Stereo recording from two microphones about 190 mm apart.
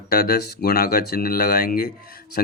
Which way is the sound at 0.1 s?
55° left (ahead or behind).